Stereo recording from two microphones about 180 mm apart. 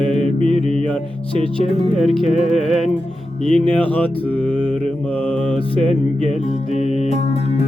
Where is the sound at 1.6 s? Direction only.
35° right (ahead or behind).